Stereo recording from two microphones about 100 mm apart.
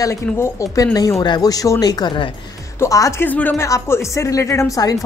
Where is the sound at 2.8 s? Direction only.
35° left (ahead or behind).